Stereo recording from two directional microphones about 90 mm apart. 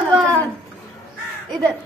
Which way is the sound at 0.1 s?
10° left (ahead or behind).